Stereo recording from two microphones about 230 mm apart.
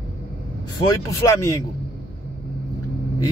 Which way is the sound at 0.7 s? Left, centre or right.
Centre.